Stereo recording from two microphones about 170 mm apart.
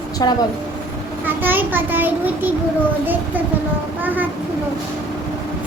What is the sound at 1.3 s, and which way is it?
A child's voice, 10° right (ahead or behind).